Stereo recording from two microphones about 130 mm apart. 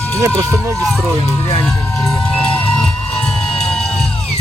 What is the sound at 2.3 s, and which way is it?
Music, 10° left (ahead or behind).